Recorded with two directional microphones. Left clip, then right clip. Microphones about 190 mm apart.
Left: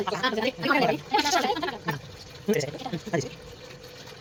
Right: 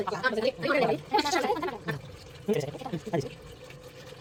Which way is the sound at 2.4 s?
5° left (ahead or behind).